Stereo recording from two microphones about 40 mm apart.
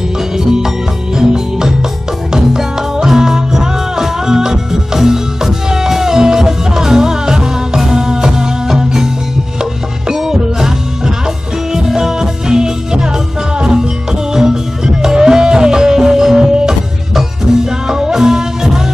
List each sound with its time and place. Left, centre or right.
0.4 s music: centre
14.3 s music: centre
17.8 s music: centre